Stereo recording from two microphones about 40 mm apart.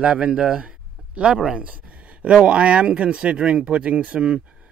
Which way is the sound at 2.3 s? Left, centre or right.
Right.